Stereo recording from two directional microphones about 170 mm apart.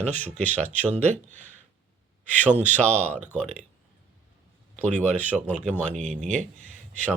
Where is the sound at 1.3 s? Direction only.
45° right (ahead or behind).